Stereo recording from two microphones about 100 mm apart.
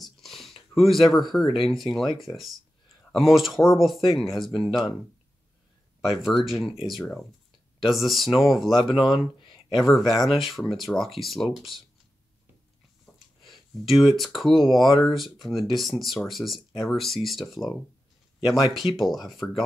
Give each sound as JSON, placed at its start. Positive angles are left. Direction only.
{"t": 0.0, "sound": "a sound", "side_deg": 0}
{"t": 1.4, "sound": "speech", "side_deg": 60}
{"t": 2.1, "sound": "speech", "side_deg": 0}
{"t": 6.0, "sound": "speech", "side_deg": 0}
{"t": 8.8, "sound": "speech", "side_deg": 55}
{"t": 9.8, "sound": "speech", "side_deg": 0}
{"t": 13.0, "sound": "a sound", "side_deg": 0}
{"t": 15.0, "sound": "speech", "side_deg": 0}